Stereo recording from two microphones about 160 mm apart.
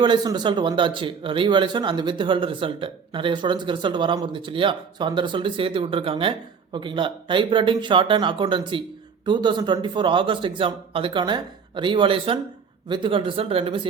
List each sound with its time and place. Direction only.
0.0 s speech: 25° right (ahead or behind)